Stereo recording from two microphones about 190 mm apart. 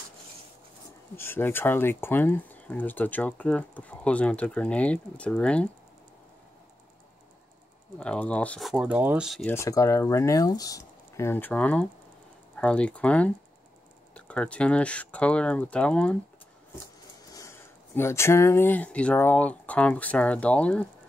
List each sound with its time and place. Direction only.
1.1 s speech: 10° left (ahead or behind)
8.0 s speech: 5° left (ahead or behind)
9.5 s speech: 15° left (ahead or behind)
17.3 s speech: 15° left (ahead or behind)